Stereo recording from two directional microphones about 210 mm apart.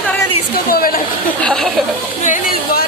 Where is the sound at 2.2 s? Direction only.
40° left (ahead or behind).